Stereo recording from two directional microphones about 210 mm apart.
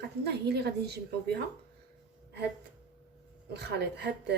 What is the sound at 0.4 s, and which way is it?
Speech, 50° right (ahead or behind).